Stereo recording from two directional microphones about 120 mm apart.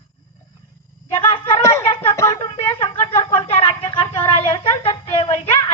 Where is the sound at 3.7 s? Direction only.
40° left (ahead or behind).